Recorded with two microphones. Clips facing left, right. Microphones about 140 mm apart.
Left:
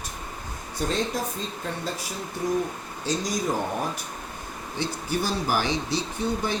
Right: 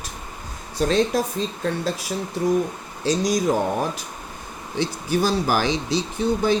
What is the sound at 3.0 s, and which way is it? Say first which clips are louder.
Speech: right 7 dB; 90° right.